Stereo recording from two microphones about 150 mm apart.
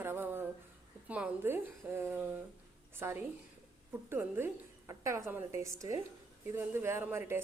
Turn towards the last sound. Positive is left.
turn(degrees=-15)  # may be behind; listen again after turning